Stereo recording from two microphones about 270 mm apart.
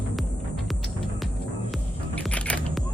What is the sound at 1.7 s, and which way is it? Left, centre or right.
Music, centre.